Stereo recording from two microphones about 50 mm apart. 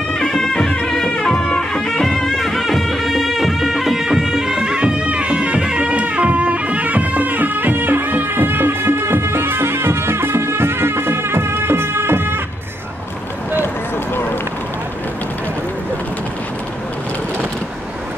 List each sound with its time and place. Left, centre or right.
0.1 s music: centre; by 12.4 s right